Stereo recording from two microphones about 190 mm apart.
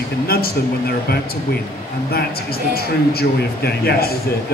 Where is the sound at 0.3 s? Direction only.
55° left (ahead or behind).